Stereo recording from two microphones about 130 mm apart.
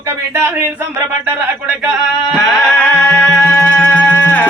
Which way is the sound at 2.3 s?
10° left (ahead or behind).